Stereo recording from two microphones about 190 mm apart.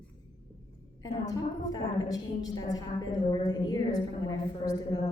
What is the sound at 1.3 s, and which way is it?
A woman's voice, 20° left (ahead or behind).